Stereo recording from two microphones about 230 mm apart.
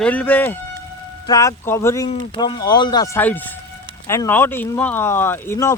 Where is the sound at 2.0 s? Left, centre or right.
Left.